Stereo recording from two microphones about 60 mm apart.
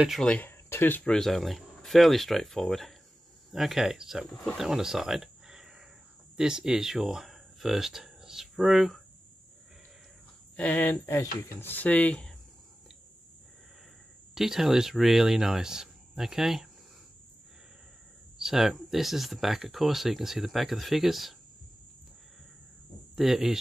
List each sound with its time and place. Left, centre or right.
0.4 s a sound: left
1.0 s speech: centre
4.6 s cricket: centre
6.3 s speech: centre
10.5 s speech: left
14.3 s speech: centre
18.4 s speech: centre
23.1 s speech: centre